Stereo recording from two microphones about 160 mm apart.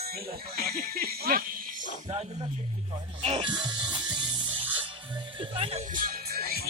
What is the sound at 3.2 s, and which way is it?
Music, 40° right (ahead or behind).